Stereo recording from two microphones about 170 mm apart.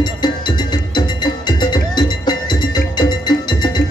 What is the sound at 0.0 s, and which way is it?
Music, 25° left (ahead or behind).